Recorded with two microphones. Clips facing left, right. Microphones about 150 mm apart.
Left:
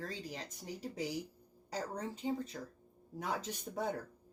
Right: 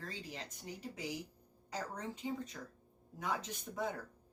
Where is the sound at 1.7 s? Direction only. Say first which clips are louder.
Left 2 dB; 35° left (ahead or behind).